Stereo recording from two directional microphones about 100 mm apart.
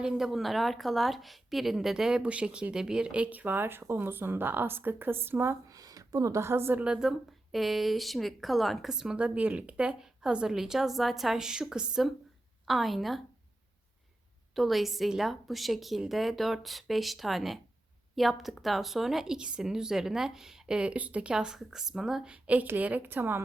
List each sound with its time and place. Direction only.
0.0 s a woman's voice: 5° right (ahead or behind); by 5.5 s 20° right (ahead or behind)
5.6 s speech: 40° right (ahead or behind)
6.8 s a woman's voice: 5° right (ahead or behind)
14.5 s a woman's voice: centre (ahead or behind); by 23.4 s 20° right (ahead or behind)